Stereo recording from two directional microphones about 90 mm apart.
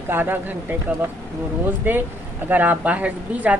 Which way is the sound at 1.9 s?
20° right (ahead or behind).